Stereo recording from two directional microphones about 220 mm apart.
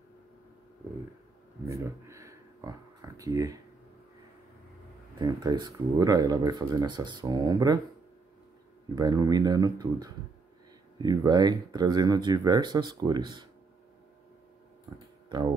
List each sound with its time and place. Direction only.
1.7 s a sound: 15° right (ahead or behind)
5.2 s speech: 20° right (ahead or behind)
8.9 s speech: 15° right (ahead or behind)
14.9 s speech: 15° right (ahead or behind)